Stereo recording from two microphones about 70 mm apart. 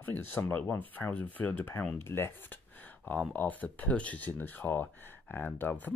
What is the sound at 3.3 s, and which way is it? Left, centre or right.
Speech, left.